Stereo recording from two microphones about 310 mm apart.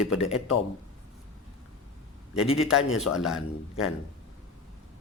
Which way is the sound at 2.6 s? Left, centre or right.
Centre.